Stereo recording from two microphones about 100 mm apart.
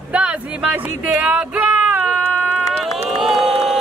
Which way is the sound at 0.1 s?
10° right (ahead or behind).